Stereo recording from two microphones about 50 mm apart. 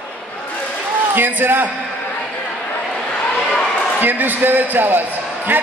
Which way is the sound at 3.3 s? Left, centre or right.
Centre.